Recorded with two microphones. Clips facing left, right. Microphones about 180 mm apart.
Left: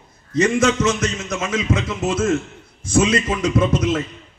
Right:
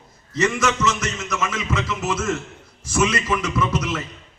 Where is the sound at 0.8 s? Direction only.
55° left (ahead or behind).